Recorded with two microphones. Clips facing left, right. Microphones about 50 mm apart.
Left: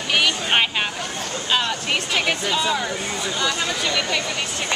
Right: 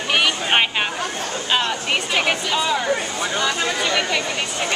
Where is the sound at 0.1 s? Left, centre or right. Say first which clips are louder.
Right 1 dB; centre.